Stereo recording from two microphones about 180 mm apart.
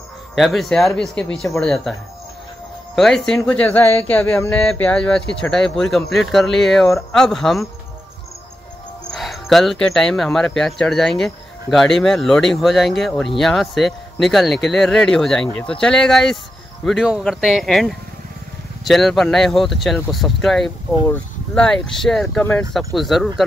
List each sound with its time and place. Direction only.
0.4 s speech: centre (ahead or behind)
3.0 s speech: centre (ahead or behind)
4.5 s speech: 5° left (ahead or behind)
9.1 s speech: centre (ahead or behind)